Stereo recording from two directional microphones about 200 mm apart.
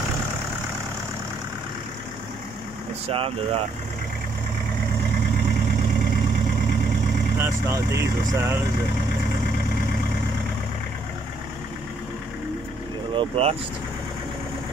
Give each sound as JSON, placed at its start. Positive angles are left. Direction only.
{"t": 3.1, "sound": "speech", "side_deg": -30}
{"t": 7.4, "sound": "speech", "side_deg": -15}
{"t": 13.1, "sound": "speech", "side_deg": -25}